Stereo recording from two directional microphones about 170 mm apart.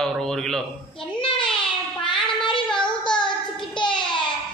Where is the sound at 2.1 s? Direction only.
5° left (ahead or behind).